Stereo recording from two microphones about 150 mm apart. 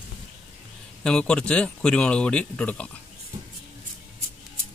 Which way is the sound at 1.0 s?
5° left (ahead or behind).